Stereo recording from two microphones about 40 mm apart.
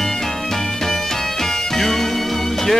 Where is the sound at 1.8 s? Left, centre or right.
Centre.